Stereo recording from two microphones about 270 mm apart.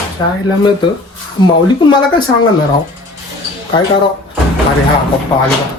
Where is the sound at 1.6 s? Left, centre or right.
Centre.